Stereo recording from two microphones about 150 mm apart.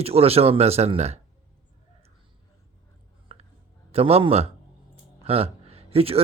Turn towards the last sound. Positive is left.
turn(degrees=-40)  # may be behind; listen again after turning